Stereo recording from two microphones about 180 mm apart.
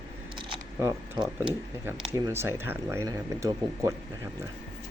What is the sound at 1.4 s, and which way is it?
Speech, 15° right (ahead or behind).